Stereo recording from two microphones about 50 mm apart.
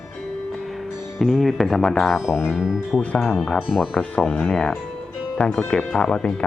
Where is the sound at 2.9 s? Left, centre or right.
Centre.